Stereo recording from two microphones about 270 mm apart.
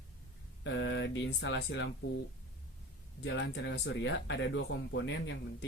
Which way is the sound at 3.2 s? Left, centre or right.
Left.